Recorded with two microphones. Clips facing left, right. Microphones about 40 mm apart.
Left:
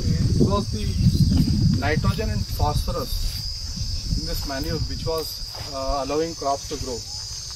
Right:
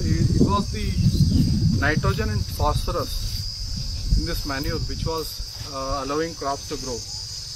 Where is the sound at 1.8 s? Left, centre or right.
Centre.